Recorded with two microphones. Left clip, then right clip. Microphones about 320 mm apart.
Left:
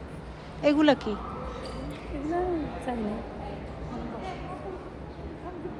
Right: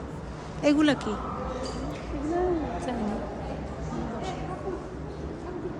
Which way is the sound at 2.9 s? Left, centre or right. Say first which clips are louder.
Left 3 dB; left.